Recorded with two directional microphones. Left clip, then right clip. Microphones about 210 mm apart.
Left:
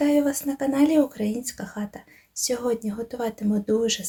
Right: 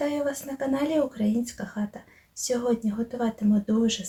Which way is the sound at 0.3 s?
35° left (ahead or behind).